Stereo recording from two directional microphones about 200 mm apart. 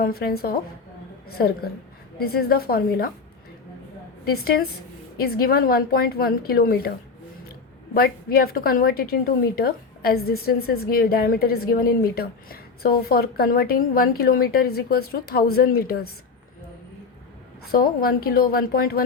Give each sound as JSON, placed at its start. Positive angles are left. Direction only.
{"t": 0.0, "sound": "a woman's voice", "side_deg": 50}
{"t": 4.3, "sound": "a woman's voice", "side_deg": 50}
{"t": 7.9, "sound": "a woman's voice", "side_deg": 50}
{"t": 17.7, "sound": "a woman's voice", "side_deg": 50}